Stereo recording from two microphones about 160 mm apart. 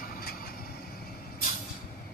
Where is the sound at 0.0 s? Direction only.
75° left (ahead or behind).